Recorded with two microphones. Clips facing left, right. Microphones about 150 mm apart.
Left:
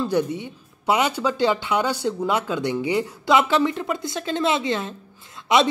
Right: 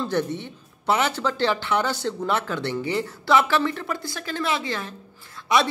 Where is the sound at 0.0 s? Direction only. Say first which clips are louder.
Left 3 dB; 10° left (ahead or behind).